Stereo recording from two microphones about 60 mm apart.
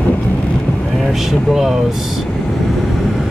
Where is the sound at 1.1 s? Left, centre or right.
Centre.